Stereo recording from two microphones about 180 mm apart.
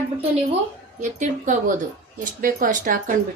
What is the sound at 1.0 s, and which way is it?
Speech, 45° right (ahead or behind).